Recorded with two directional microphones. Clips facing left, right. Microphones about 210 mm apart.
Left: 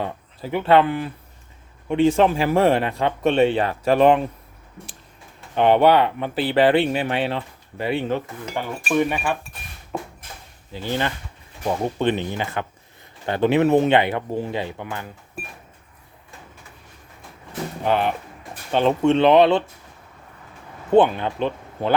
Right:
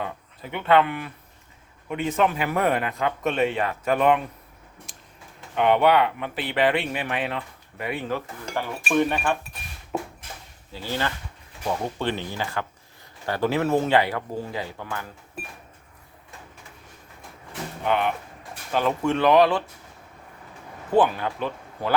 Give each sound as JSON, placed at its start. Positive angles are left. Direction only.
{"t": 0.0, "sound": "speech", "side_deg": 30}
{"t": 5.5, "sound": "speech", "side_deg": 30}
{"t": 8.4, "sound": "speech", "side_deg": 10}
{"t": 9.9, "sound": "a sound", "side_deg": -5}
{"t": 10.7, "sound": "speech", "side_deg": 20}
{"t": 17.8, "sound": "speech", "side_deg": 35}
{"t": 20.9, "sound": "speech", "side_deg": 25}